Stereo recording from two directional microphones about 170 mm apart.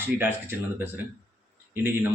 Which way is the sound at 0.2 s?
10° right (ahead or behind).